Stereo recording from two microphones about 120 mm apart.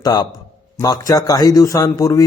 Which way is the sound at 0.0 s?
30° left (ahead or behind).